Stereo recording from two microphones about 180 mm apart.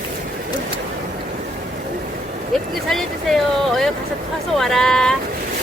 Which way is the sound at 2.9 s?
Centre (ahead or behind).